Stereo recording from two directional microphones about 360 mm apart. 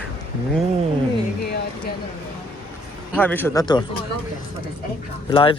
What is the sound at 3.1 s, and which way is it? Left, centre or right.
Speech, centre.